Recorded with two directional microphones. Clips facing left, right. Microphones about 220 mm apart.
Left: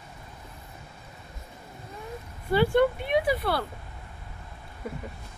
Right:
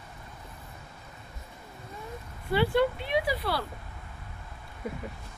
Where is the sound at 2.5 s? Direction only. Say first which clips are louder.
Left 3 dB; 50° left (ahead or behind).